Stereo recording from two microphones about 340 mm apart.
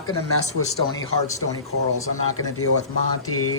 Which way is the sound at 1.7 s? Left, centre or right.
Left.